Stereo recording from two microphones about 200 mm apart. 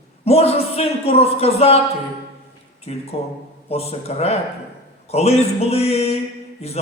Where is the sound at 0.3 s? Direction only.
30° left (ahead or behind).